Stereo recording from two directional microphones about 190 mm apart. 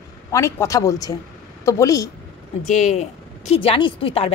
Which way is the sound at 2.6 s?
40° left (ahead or behind).